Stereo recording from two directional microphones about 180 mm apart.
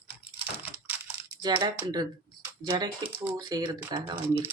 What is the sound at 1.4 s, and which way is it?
Speech, 25° right (ahead or behind).